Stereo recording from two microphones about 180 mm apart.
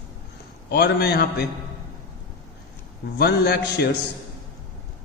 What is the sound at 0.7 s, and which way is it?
Speech, 65° left (ahead or behind).